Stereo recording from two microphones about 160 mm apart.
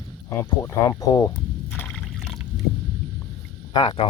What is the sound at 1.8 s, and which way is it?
Liquid, 10° left (ahead or behind).